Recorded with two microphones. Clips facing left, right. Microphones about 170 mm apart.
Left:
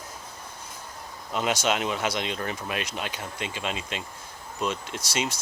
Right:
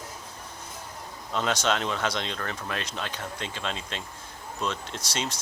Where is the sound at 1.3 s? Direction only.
10° left (ahead or behind).